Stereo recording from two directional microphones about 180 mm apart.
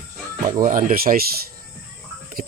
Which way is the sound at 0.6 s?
45° right (ahead or behind).